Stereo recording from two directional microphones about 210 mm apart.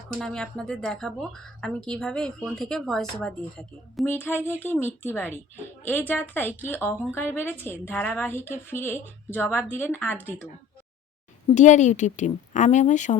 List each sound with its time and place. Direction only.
0.1 s a woman's voice: 5° left (ahead or behind)
11.5 s a woman's voice: 35° left (ahead or behind)